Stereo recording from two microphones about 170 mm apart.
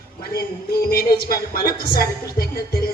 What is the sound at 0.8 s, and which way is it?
Speech, 60° left (ahead or behind).